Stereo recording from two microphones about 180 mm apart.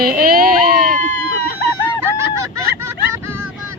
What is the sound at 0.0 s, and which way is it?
Baby cry, 55° right (ahead or behind).